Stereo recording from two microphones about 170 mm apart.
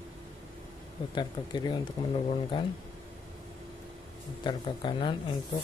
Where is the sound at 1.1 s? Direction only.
25° left (ahead or behind).